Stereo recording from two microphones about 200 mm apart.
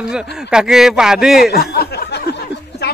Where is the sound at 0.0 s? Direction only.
5° right (ahead or behind).